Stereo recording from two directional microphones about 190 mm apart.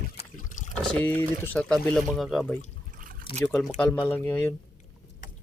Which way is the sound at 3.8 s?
5° left (ahead or behind).